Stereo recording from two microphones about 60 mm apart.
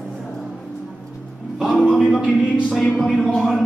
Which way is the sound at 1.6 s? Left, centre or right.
Centre.